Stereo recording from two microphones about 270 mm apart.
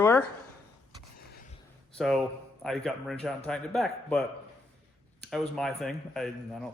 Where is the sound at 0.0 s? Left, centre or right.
Centre.